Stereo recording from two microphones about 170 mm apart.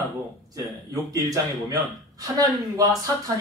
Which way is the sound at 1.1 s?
20° right (ahead or behind).